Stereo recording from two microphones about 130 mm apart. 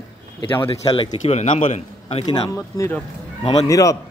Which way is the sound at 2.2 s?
30° left (ahead or behind).